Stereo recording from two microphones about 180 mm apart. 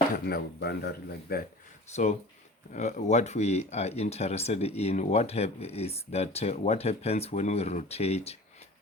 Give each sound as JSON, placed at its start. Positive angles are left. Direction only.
{"t": 0.3, "sound": "speech", "side_deg": 60}
{"t": 1.9, "sound": "speech", "side_deg": 40}